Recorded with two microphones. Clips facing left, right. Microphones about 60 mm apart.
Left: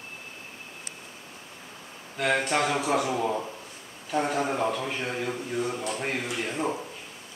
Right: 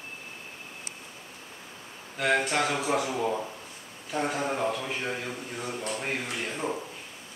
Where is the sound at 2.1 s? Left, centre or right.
Centre.